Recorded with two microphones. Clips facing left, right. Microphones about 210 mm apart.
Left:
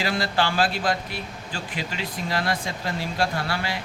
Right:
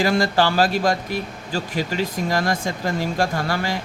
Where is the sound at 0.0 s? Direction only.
45° right (ahead or behind).